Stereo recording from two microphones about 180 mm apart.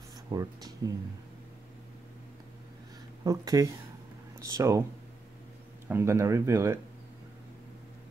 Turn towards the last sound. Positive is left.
turn(degrees=-15)  # may be behind; listen again after turning